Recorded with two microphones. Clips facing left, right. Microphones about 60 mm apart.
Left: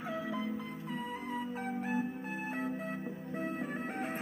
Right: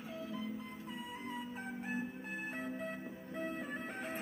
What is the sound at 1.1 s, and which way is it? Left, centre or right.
Music, left.